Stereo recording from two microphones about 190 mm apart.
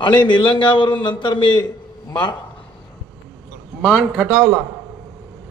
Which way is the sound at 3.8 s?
5° right (ahead or behind).